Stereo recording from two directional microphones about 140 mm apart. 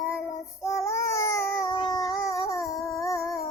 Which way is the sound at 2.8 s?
Centre (ahead or behind).